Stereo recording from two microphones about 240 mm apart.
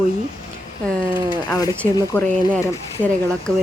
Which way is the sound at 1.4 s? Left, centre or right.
Centre.